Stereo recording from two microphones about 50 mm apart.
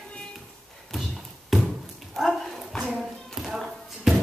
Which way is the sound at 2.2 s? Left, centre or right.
Centre.